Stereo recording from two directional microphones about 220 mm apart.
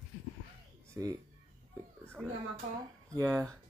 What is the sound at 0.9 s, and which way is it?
Speech, 15° right (ahead or behind).